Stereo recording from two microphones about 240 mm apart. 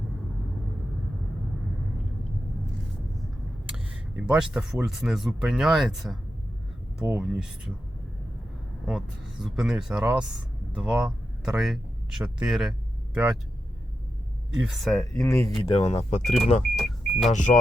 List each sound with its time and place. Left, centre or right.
4.2 s speech: centre
8.9 s speech: centre
14.6 s speech: centre
15.1 s speech: centre
15.6 s speech: left
16.2 s speech: centre
16.7 s car: centre
17.3 s speech: left